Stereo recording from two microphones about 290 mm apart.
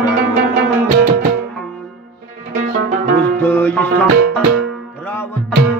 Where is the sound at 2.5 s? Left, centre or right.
Right.